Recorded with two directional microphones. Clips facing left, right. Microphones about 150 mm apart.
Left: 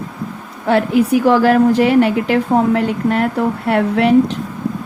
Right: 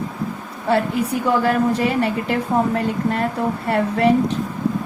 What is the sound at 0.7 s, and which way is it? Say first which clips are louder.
A woman's voice: left 6 dB; 90° left.